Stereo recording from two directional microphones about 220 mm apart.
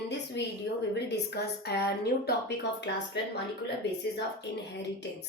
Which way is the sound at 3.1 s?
50° left (ahead or behind).